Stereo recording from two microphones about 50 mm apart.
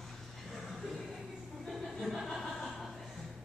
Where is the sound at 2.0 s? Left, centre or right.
Centre.